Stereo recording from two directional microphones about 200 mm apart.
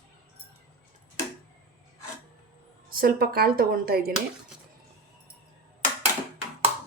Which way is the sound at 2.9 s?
50° right (ahead or behind).